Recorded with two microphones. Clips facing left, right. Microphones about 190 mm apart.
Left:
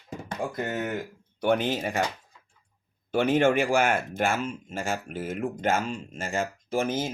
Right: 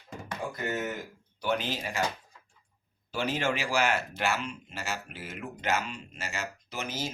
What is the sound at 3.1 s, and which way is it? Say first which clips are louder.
Speech: left 9 dB; 55° left (ahead or behind).